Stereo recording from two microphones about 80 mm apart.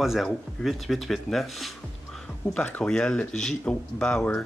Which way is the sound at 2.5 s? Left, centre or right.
Centre.